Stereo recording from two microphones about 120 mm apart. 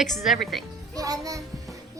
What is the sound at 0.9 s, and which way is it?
Speech, 30° right (ahead or behind).